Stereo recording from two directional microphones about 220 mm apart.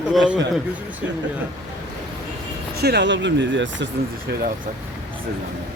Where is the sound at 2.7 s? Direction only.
45° right (ahead or behind).